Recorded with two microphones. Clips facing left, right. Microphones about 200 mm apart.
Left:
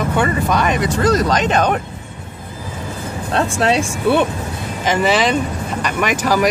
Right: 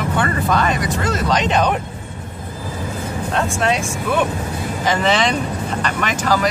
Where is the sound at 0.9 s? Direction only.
40° left (ahead or behind).